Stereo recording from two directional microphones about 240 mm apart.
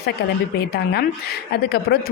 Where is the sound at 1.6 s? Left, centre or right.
Left.